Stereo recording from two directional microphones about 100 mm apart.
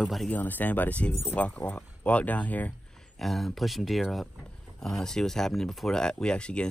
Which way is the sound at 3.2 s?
Centre (ahead or behind).